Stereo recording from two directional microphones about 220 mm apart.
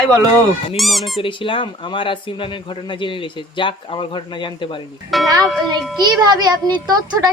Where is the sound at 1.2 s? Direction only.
25° left (ahead or behind).